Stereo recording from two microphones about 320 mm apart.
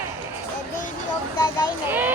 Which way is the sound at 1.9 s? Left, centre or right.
Centre.